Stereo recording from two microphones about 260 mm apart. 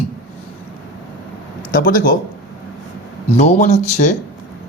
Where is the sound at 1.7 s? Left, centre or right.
Left.